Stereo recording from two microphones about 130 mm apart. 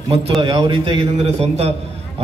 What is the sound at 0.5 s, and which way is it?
Speech, 40° right (ahead or behind).